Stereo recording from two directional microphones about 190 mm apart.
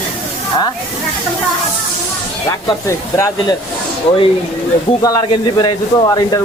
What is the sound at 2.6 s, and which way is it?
Speech, 15° left (ahead or behind).